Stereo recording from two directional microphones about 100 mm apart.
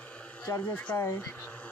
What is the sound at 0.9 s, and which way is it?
Speech, 30° left (ahead or behind).